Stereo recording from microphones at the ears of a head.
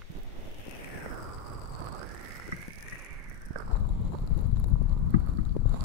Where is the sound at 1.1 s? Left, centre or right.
Right.